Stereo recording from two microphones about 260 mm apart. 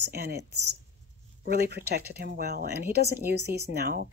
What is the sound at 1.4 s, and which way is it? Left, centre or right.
Speech, right.